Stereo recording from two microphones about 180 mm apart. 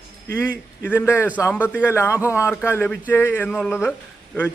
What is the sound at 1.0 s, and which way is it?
A man's voice, 15° left (ahead or behind).